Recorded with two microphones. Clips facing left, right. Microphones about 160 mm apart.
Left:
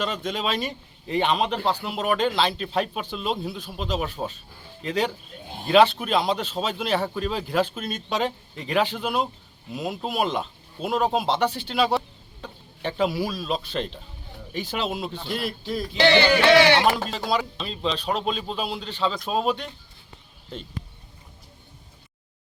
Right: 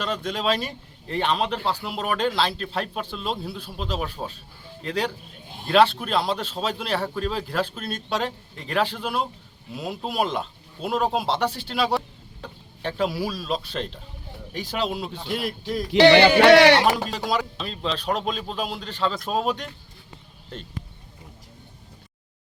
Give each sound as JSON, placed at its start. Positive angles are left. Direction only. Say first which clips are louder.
{"t": 0.0, "sound": "a man's voice", "louder": "right 1 dB", "side_deg": 5}
{"t": 15.1, "sound": "a man's voice", "louder": "right 1 dB", "side_deg": -10}
{"t": 15.9, "sound": "a sound", "louder": "right 6 dB", "side_deg": -80}
{"t": 16.8, "sound": "a man's voice", "louder": "even", "side_deg": 0}
{"t": 18.1, "sound": "a man's voice", "louder": "even", "side_deg": 0}
{"t": 18.9, "sound": "a man's voice", "louder": "even", "side_deg": 0}